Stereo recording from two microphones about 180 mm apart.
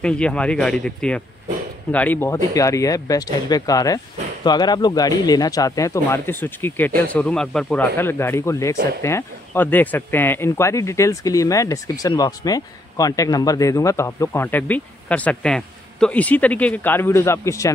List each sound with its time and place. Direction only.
0.0 s speech: 5° left (ahead or behind)